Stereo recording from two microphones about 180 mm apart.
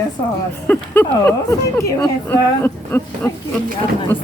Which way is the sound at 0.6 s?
10° left (ahead or behind).